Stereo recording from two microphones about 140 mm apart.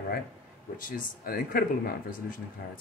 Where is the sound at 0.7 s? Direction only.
75° left (ahead or behind).